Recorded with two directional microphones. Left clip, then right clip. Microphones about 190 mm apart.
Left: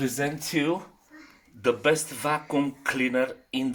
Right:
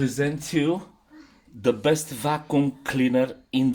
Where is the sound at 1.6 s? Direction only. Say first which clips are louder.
Right 1 dB; 35° right (ahead or behind).